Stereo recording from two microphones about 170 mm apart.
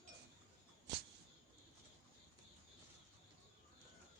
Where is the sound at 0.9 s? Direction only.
90° right.